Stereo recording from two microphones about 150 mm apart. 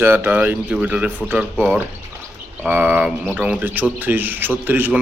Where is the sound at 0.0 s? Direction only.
15° right (ahead or behind).